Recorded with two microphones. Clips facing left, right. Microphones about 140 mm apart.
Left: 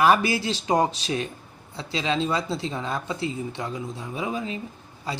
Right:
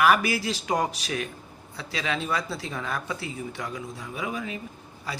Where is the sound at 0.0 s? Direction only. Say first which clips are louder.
Left 2 dB; 25° left (ahead or behind).